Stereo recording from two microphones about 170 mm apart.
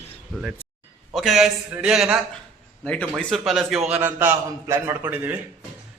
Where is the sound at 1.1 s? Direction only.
Centre (ahead or behind).